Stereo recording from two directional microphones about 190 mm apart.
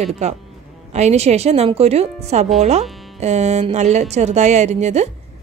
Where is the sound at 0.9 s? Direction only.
35° right (ahead or behind).